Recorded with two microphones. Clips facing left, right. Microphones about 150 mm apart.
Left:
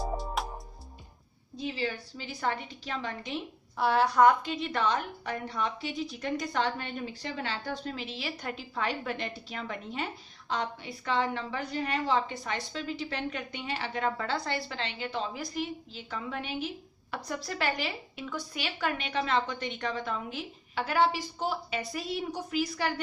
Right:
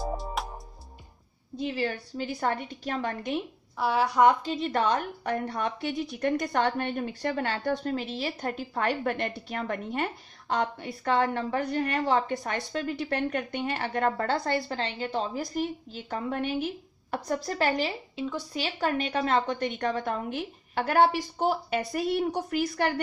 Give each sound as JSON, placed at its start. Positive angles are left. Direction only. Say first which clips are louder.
{"t": 0.0, "sound": "music", "louder": "right 1 dB", "side_deg": 0}
{"t": 1.8, "sound": "a woman's voice", "louder": "right 4 dB", "side_deg": -50}
{"t": 3.7, "sound": "a woman's voice", "louder": "even", "side_deg": -5}
{"t": 4.1, "sound": "a woman's voice", "louder": "right 1 dB", "side_deg": -20}
{"t": 4.4, "sound": "a woman's voice", "louder": "right 4 dB", "side_deg": -40}
{"t": 17.6, "sound": "a woman's voice", "louder": "right 4 dB", "side_deg": -30}